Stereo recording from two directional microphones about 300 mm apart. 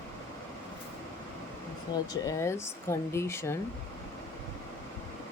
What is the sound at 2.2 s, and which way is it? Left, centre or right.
Speech, centre.